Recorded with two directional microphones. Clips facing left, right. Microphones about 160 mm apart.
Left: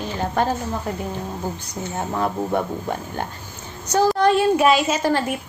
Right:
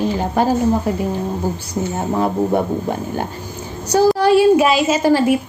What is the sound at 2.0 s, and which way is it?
Speech, 15° right (ahead or behind).